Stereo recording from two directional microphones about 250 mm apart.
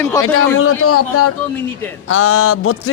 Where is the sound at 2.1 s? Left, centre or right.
Left.